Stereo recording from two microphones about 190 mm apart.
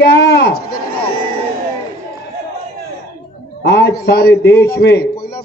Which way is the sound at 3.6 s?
60° left (ahead or behind).